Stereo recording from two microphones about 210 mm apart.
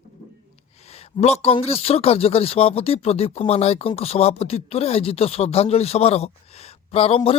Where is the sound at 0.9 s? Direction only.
30° left (ahead or behind).